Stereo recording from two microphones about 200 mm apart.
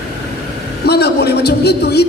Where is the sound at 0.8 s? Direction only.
55° left (ahead or behind).